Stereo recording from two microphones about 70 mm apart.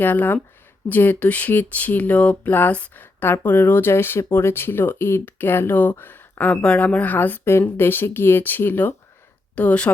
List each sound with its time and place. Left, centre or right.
0.0 s speech: left
9.6 s speech: centre